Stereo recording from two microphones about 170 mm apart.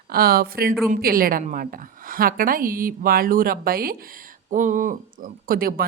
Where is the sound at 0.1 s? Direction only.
65° right (ahead or behind).